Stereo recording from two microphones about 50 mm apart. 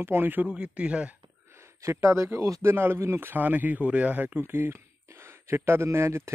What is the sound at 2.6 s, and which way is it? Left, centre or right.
Speech, right.